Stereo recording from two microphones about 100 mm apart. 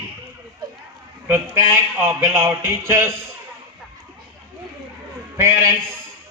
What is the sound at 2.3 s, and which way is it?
Speech, 25° right (ahead or behind).